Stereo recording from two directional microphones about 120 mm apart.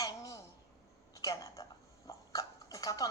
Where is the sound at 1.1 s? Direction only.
30° left (ahead or behind).